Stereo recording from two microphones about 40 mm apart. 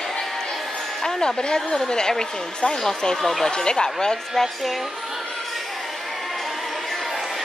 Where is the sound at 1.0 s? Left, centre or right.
Centre.